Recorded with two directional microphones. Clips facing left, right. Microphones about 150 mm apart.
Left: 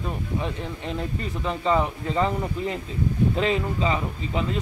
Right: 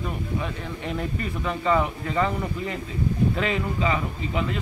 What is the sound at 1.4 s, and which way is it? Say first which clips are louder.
Speech: even; 25° left (ahead or behind).